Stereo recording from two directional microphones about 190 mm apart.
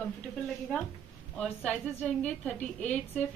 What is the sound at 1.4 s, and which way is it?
A woman's voice, 5° left (ahead or behind).